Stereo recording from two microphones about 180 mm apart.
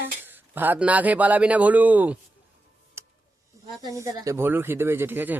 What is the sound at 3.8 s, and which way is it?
Speech, 20° right (ahead or behind).